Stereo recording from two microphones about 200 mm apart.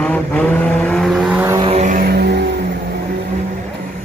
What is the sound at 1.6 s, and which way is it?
Vehicle, 35° right (ahead or behind).